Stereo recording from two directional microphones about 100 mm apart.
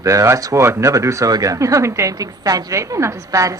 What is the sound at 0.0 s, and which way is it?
Speech, 30° right (ahead or behind).